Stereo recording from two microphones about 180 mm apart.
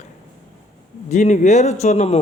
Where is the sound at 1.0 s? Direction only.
40° left (ahead or behind).